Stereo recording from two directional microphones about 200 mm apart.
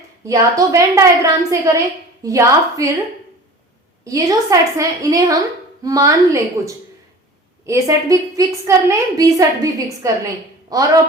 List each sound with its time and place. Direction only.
0.3 s a woman's voice: 15° right (ahead or behind)
4.0 s a woman's voice: 15° right (ahead or behind)